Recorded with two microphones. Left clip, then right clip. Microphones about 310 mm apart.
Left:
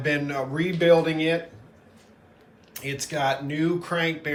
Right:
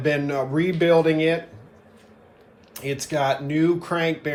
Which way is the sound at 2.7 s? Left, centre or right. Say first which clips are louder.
Right 4 dB; centre.